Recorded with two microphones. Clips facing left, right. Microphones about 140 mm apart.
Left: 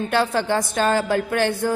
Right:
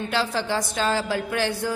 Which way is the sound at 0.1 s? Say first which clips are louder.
Left 5 dB; 55° left (ahead or behind).